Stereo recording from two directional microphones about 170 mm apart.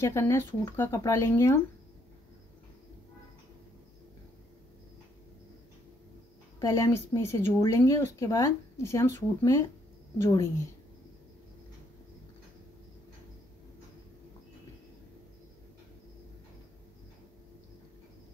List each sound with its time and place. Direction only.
0.0 s speech: 15° left (ahead or behind)
6.6 s speech: 15° left (ahead or behind)